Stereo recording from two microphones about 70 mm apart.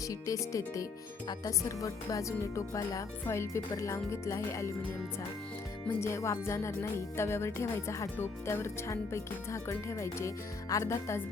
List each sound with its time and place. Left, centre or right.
0.1 s speech: left
6.0 s speech: left